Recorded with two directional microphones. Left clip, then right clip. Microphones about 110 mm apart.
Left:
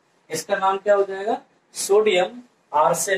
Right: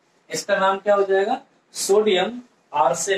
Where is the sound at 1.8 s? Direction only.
30° left (ahead or behind).